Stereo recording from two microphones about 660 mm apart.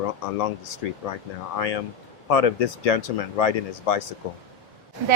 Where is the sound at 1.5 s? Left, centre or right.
Left.